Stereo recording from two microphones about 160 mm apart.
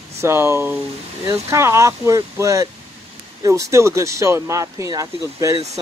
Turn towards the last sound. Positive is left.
turn(degrees=-20)  # may be behind; listen again after turning